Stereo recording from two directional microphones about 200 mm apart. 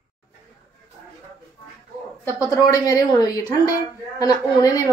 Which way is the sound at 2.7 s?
15° left (ahead or behind).